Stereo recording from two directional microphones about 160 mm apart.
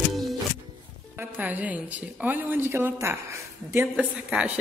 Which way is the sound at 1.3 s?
10° right (ahead or behind).